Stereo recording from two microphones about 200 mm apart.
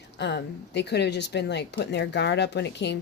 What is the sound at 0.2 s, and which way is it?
Speech, 60° left (ahead or behind).